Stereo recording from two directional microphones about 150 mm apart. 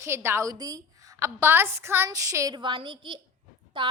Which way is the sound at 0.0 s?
15° right (ahead or behind).